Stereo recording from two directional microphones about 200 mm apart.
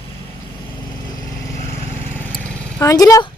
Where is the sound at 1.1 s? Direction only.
20° left (ahead or behind).